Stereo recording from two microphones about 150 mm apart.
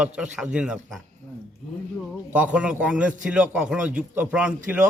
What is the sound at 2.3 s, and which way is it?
A man's voice, 10° right (ahead or behind).